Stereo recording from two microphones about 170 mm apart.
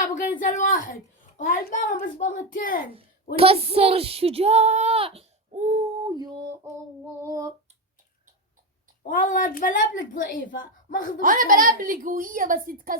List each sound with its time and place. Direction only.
0.0 s a woman's voice: 50° left (ahead or behind)
3.3 s speech: 35° right (ahead or behind)
6.1 s a sound: 25° right (ahead or behind)
9.0 s a woman's voice: 50° left (ahead or behind)
11.2 s a woman's voice: 50° right (ahead or behind)